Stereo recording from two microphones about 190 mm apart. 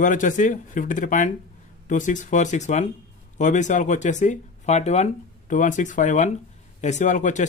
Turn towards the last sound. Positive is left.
turn(degrees=40)  # may be behind; listen again after turning